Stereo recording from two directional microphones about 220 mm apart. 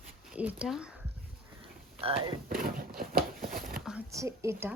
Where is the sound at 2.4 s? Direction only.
40° right (ahead or behind).